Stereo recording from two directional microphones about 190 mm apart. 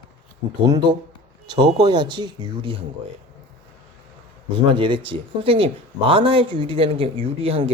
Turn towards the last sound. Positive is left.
turn(degrees=-30)  # may be behind; listen again after turning